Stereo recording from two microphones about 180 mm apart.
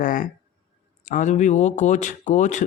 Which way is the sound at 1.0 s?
45° left (ahead or behind).